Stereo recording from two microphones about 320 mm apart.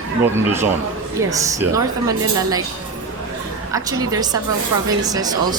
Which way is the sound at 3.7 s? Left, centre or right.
Centre.